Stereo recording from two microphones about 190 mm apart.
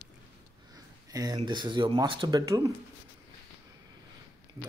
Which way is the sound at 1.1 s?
20° right (ahead or behind).